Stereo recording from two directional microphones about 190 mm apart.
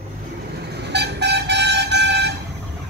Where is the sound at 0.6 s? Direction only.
60° right (ahead or behind).